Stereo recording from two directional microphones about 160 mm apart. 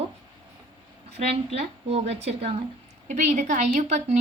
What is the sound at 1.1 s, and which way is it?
A woman's voice, 40° right (ahead or behind).